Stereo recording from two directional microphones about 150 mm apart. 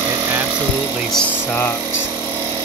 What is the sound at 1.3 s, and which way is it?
Speech, 15° left (ahead or behind).